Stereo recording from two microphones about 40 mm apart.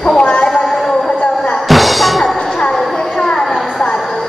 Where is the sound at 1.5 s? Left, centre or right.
Centre.